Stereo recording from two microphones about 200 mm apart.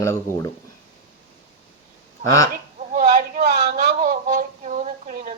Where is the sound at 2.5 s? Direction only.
45° right (ahead or behind).